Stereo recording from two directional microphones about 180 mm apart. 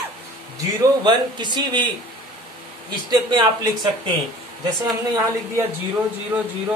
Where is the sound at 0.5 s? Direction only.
25° right (ahead or behind).